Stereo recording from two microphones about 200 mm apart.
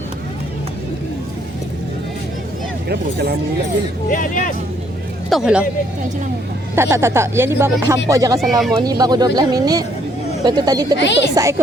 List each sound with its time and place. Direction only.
2.9 s speech: 50° right (ahead or behind)
4.1 s speech: 40° left (ahead or behind)
5.3 s speech: 5° right (ahead or behind)
6.7 s speech: 15° right (ahead or behind)
8.4 s speech: centre (ahead or behind)
8.8 s speech: 20° right (ahead or behind)
10.9 s speech: 60° left (ahead or behind)
11.3 s speech: 15° right (ahead or behind)